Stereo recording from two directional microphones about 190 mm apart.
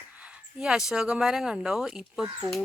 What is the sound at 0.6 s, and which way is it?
Speech, 5° right (ahead or behind).